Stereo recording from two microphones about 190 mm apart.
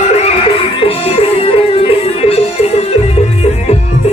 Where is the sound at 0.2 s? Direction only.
30° left (ahead or behind).